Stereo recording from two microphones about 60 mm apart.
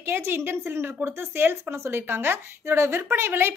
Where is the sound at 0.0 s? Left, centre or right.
Right.